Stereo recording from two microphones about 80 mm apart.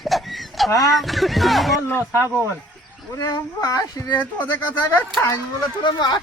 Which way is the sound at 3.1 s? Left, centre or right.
Left.